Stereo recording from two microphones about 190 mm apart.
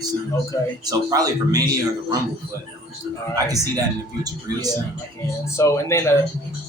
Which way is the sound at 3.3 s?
20° right (ahead or behind).